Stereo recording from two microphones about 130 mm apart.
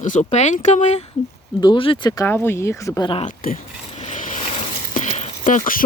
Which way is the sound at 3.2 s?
90° left.